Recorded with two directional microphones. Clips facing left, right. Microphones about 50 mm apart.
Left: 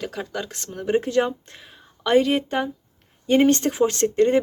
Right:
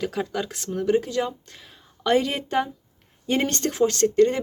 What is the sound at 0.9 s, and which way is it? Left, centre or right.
Speech, left.